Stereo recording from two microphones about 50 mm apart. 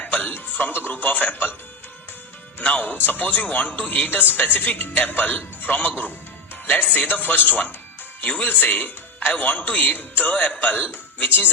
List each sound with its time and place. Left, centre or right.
0.0 s speech: left
2.6 s a man's voice: left